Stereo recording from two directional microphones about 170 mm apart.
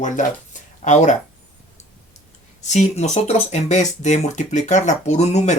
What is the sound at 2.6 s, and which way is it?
Speech, 45° left (ahead or behind).